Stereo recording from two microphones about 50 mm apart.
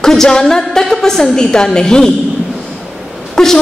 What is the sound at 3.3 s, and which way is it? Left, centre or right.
Speech, centre.